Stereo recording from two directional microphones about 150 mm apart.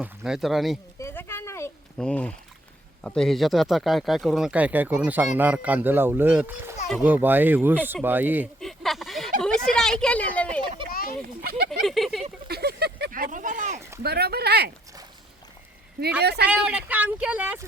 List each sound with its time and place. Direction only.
0.2 s speech: centre (ahead or behind)
0.9 s a sound: 15° left (ahead or behind)
2.0 s speech: 5° left (ahead or behind); by 8.4 s 10° right (ahead or behind)
8.6 s a sound: centre (ahead or behind)
9.4 s speech: 5° left (ahead or behind)
10.9 s a sound: 75° left (ahead or behind)
11.2 s speech: 90° right
11.8 s speech: centre (ahead or behind)
12.5 s speech: 90° right; by 13.8 s 55° right (ahead or behind)
14.0 s speech: 90° right
16.2 s speech: 90° right
16.5 s speech: 10° right (ahead or behind)